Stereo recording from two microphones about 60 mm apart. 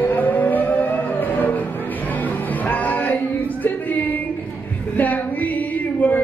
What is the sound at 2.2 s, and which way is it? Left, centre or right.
Music, left.